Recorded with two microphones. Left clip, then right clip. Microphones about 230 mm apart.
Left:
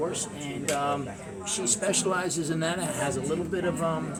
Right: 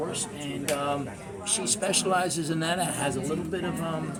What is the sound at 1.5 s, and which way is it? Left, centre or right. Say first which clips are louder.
A woman's voice: even; centre.